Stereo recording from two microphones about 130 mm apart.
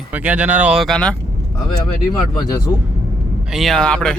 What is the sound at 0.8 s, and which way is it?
Speech, 5° left (ahead or behind).